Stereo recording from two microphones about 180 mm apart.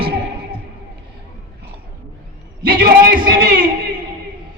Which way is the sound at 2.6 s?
55° right (ahead or behind).